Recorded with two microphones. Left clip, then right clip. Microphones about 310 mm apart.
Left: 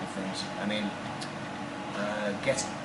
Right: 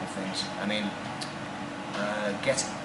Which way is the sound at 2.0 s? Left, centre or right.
Centre.